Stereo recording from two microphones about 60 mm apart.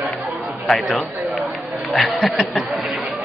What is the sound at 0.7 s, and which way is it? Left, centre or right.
Speech, centre.